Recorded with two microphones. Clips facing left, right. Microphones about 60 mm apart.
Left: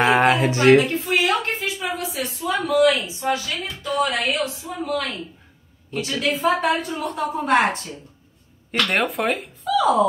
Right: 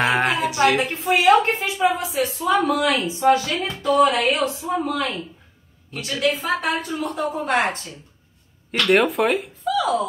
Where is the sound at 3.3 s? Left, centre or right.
Right.